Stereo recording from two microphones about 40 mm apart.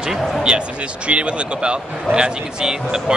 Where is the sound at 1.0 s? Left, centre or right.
Right.